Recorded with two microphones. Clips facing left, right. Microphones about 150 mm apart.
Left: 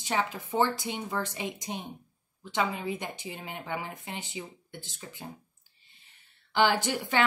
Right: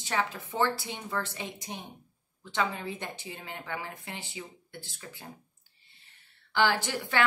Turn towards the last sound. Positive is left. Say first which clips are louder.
# left 2 dB
turn(degrees=20)  # may be behind; listen again after turning